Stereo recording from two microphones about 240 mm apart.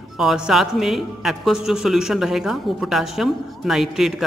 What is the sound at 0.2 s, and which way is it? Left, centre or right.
Speech, centre.